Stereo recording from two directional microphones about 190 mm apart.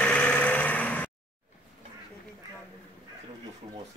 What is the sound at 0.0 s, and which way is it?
Vehicle, 5° left (ahead or behind).